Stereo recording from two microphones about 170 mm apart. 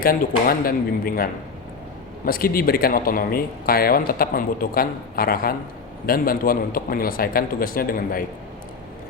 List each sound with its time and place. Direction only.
0.0 s speech: 60° left (ahead or behind)